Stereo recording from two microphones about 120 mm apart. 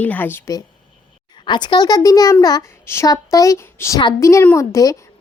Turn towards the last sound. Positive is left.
turn(degrees=30)  # may be behind; listen again after turning